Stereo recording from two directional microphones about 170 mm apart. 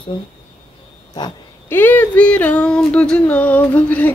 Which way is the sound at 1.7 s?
10° left (ahead or behind).